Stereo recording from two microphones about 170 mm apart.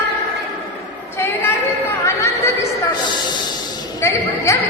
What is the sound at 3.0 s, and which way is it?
Speech, 25° left (ahead or behind).